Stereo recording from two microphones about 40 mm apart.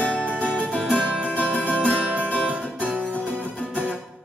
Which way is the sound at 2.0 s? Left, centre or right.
Right.